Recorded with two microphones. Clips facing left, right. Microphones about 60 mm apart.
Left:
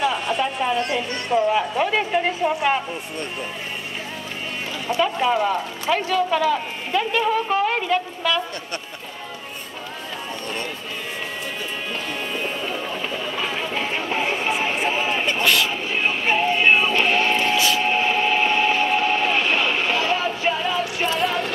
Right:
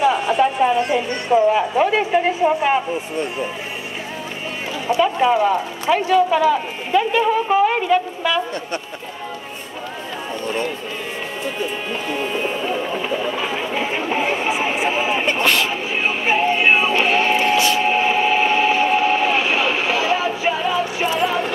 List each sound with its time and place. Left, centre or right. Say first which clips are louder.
0.0 s a sound: right 5 dB; centre
0.4 s speech: right 7 dB; centre
4.8 s speech: right 4 dB; centre
11.9 s music: right 5 dB; centre
15.4 s speech: even; right
15.7 s music: right 2 dB; centre
17.6 s a sound: right 3 dB; right
17.8 s vehicle: right 3 dB; centre